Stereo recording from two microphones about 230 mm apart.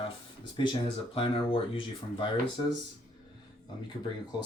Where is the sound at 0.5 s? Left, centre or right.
Left.